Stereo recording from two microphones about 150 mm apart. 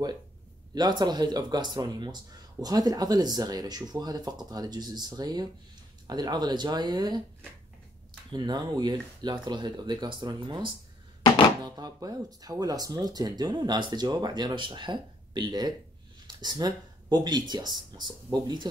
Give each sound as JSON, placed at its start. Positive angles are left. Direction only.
{"t": 0.7, "sound": "speech", "side_deg": -30}
{"t": 8.3, "sound": "speech", "side_deg": -30}